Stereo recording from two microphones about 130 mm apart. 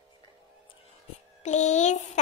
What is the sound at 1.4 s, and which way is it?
Speech, 65° left (ahead or behind).